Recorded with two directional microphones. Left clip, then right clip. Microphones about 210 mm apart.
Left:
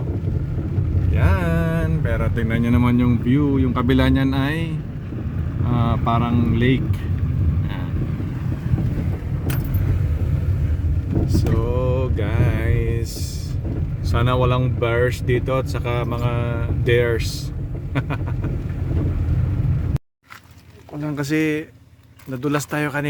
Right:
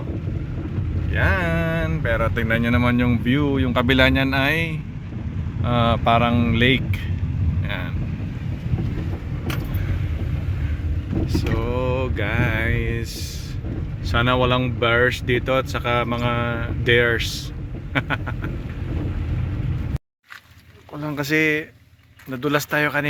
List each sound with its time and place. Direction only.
1.1 s speech: 10° left (ahead or behind)
3.3 s speech: 5° right (ahead or behind)
3.8 s speech: 5° left (ahead or behind)
11.3 s a sound: 15° left (ahead or behind)
14.1 s speech: 15° left (ahead or behind)
21.0 s speech: 15° left (ahead or behind)